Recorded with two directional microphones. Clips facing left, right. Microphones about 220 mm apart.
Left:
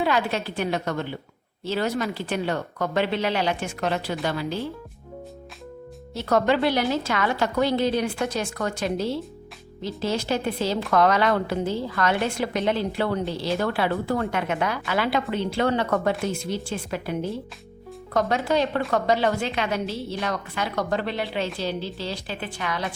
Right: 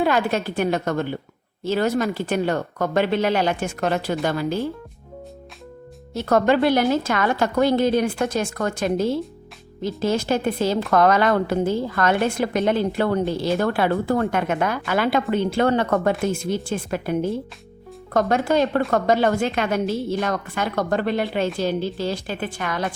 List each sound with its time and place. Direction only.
0.0 s speech: 50° right (ahead or behind)
6.1 s speech: 50° right (ahead or behind)